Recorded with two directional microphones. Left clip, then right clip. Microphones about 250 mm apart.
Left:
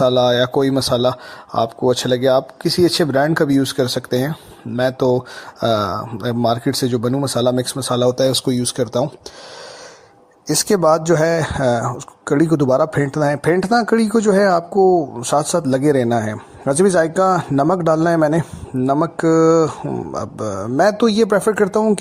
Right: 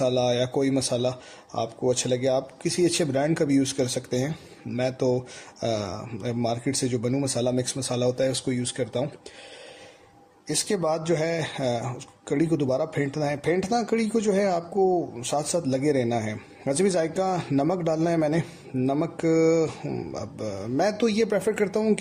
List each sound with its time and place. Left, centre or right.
0.0 s speech: centre
10.4 s speech: left